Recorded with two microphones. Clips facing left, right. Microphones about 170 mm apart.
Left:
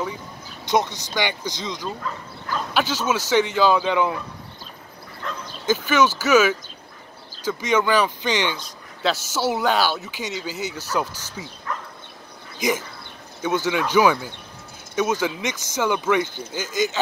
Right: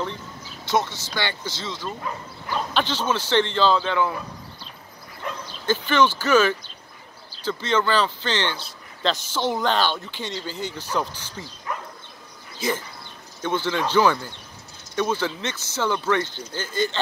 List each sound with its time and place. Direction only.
0.7 s speech: 20° left (ahead or behind)
5.7 s speech: 10° left (ahead or behind)
12.5 s speech: 15° left (ahead or behind)